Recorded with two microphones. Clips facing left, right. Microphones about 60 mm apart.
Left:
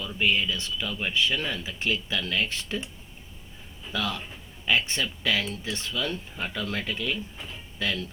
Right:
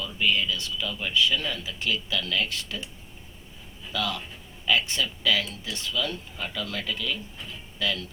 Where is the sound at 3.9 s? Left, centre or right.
Left.